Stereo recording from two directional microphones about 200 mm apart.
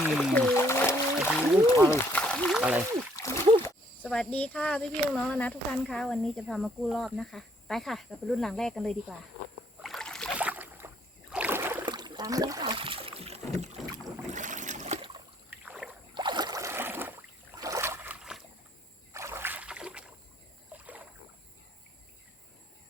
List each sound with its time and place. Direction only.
0.0 s a sound: centre (ahead or behind)
3.6 s speech: 5° left (ahead or behind)
9.8 s rowboat: centre (ahead or behind)
11.9 s boat: 20° right (ahead or behind)
15.4 s rowboat: 5° right (ahead or behind)
16.1 s boat: 20° right (ahead or behind); by 18.4 s 5° right (ahead or behind)
19.1 s a sound: 15° right (ahead or behind)
20.7 s rowboat: 5° right (ahead or behind)